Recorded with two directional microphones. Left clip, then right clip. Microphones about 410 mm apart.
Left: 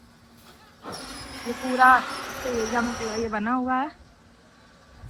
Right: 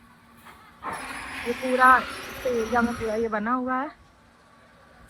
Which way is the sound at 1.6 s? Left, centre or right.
Centre.